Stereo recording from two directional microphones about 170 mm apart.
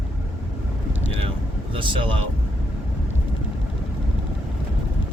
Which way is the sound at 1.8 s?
30° right (ahead or behind).